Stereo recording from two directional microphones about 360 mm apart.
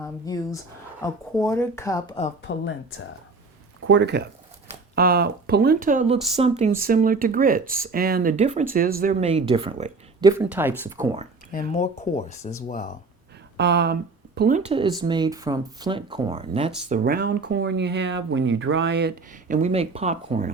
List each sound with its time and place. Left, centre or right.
0.0 s speech: centre
2.4 s speech: left
3.8 s speech: right; by 11.2 s centre
11.5 s speech: centre
13.6 s speech: right
17.0 s speech: right